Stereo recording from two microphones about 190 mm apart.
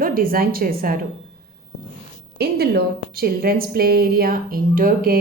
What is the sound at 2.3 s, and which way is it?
A woman's voice, 60° right (ahead or behind).